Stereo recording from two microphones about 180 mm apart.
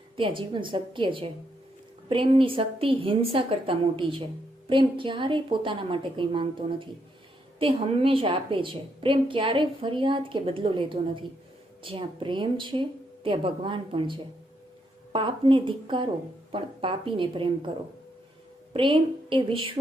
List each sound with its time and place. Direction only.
0.2 s a woman's voice: 25° right (ahead or behind)
18.7 s a woman's voice: 30° right (ahead or behind)